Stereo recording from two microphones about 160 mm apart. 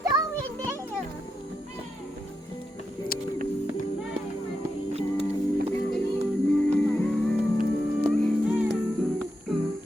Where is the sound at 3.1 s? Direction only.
65° left (ahead or behind).